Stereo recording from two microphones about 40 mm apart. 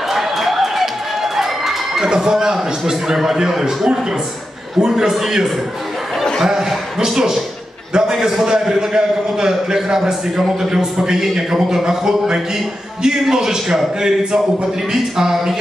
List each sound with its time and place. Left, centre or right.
0.1 s applause: centre
2.0 s a man's voice: centre